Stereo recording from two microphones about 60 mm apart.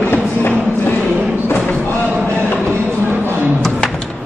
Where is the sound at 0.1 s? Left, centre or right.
Left.